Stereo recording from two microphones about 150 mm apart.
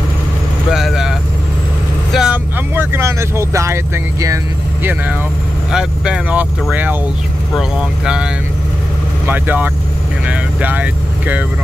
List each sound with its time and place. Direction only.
0.7 s speech: centre (ahead or behind)
2.1 s speech: 10° right (ahead or behind)
5.7 s speech: 5° right (ahead or behind)